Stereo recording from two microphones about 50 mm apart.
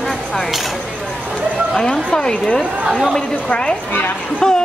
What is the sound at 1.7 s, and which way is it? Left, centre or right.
Speech, centre.